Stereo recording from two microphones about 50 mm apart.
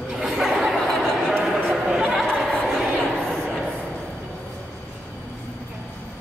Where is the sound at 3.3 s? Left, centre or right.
Right.